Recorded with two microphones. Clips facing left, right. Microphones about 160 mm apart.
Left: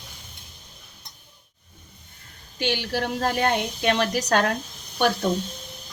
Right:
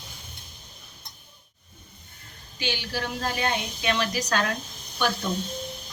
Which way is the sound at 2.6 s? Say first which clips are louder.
Left 5 dB; 65° left (ahead or behind).